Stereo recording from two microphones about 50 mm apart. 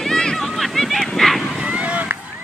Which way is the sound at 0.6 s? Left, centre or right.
Centre.